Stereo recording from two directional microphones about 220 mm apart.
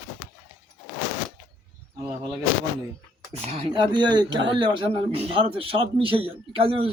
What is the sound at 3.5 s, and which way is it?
Speech, 25° right (ahead or behind).